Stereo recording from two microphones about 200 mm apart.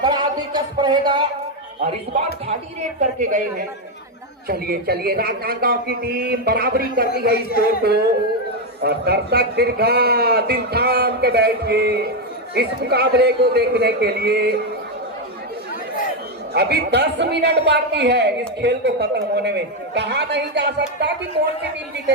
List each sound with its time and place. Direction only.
0.0 s a sound: 20° right (ahead or behind)
3.0 s a woman's voice: 40° right (ahead or behind)
4.4 s a man's voice: 50° right (ahead or behind)
7.3 s speech: 50° left (ahead or behind)
7.8 s a man's voice: 50° right (ahead or behind)
16.6 s a man's voice: 55° right (ahead or behind)